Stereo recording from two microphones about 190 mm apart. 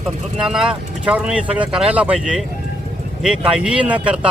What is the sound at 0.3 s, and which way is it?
Speech, 5° right (ahead or behind).